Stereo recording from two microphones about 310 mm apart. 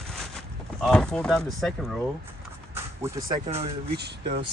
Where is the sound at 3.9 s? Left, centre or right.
Right.